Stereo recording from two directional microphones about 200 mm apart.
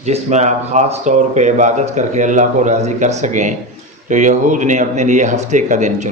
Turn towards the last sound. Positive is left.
turn(degrees=-35)  # may be behind; listen again after turning